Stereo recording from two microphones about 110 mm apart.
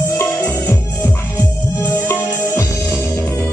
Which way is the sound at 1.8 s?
20° left (ahead or behind).